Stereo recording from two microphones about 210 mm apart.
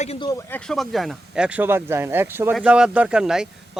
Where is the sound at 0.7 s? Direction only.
Centre (ahead or behind).